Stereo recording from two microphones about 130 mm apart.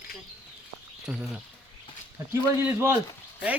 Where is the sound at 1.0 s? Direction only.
5° right (ahead or behind).